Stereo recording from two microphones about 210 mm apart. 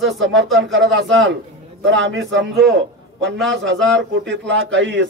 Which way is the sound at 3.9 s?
60° right (ahead or behind).